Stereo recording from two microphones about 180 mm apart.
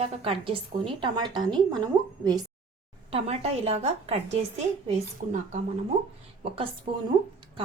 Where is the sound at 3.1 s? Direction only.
35° right (ahead or behind).